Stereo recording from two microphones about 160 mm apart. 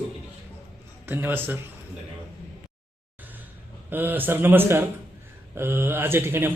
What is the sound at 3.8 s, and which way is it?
Speech, 10° right (ahead or behind).